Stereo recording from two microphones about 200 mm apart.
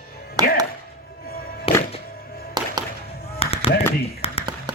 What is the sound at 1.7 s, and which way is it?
Music, 30° left (ahead or behind).